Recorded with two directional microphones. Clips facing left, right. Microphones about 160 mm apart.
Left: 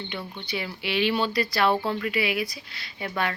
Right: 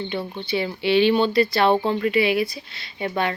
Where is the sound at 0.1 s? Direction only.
30° right (ahead or behind).